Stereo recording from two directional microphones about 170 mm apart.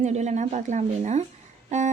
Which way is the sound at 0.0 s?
45° right (ahead or behind).